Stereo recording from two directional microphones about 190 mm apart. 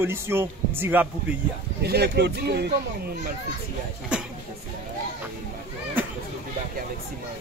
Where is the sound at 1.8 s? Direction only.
60° right (ahead or behind).